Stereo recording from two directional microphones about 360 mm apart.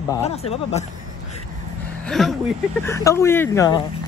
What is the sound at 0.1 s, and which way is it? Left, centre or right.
Speech, centre.